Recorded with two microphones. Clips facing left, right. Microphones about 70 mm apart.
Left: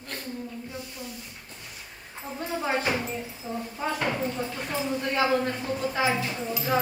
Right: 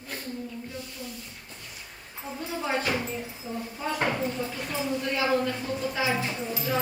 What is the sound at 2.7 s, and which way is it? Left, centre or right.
Speech, left.